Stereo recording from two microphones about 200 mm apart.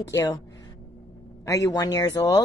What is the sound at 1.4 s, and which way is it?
Speech, 15° left (ahead or behind).